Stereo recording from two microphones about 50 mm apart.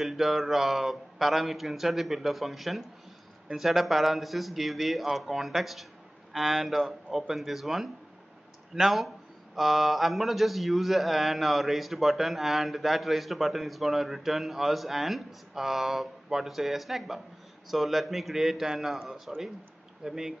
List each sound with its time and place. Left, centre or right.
0.0 s a man's voice: centre